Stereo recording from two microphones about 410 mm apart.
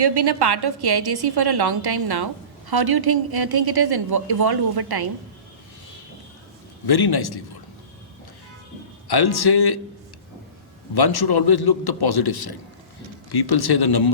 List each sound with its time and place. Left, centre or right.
0.0 s a woman's voice: right
6.8 s a man's voice: left
9.0 s a man's voice: left
10.9 s a man's voice: left